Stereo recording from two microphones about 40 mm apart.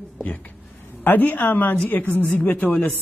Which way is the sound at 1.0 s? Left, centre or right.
Left.